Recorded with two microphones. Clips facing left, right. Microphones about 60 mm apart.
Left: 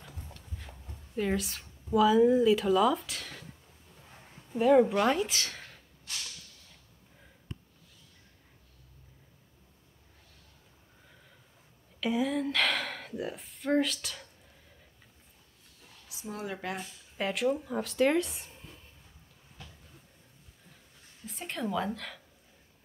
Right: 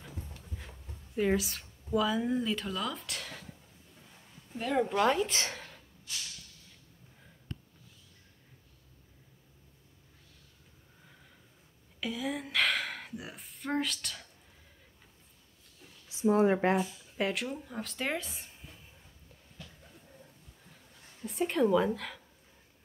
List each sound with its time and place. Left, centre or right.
0.8 s a woman's voice: centre
4.6 s speech: centre
5.3 s speech: right
12.3 s speech: centre
16.1 s a sound: right
17.2 s speech: centre
21.3 s speech: centre